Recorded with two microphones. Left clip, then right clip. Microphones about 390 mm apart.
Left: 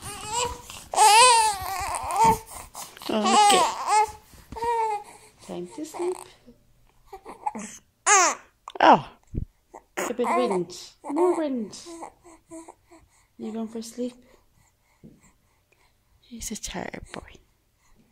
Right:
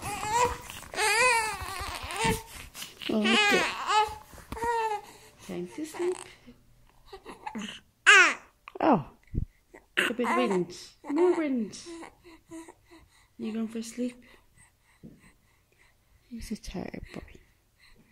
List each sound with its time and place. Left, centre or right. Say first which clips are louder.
0.9 s baby cry: left 9 dB; centre
3.2 s a sound: left 6 dB; centre
5.8 s speech: left 2 dB; centre
7.1 s babbling: left 8 dB; centre
9.7 s a sound: right 2 dB; centre
13.5 s speech: left 2 dB; left
16.3 s speech: left 6 dB; left